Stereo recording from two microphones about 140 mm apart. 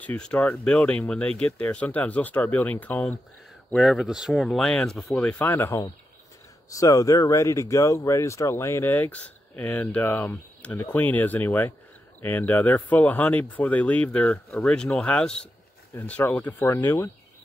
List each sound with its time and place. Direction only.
0.0 s speech: 10° left (ahead or behind)